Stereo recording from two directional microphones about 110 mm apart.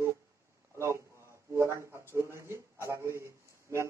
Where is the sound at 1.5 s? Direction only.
25° right (ahead or behind).